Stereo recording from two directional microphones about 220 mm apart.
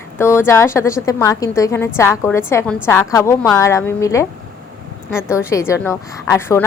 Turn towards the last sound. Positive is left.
turn(degrees=15)  # may be behind; listen again after turning